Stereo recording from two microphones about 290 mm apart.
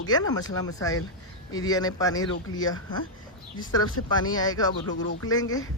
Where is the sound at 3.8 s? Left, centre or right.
Left.